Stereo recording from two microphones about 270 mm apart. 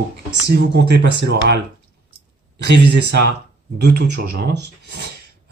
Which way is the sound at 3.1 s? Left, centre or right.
Right.